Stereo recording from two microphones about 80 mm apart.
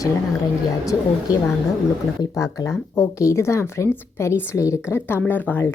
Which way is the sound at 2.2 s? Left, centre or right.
Left.